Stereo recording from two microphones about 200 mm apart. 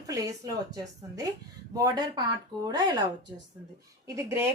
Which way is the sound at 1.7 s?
20° right (ahead or behind).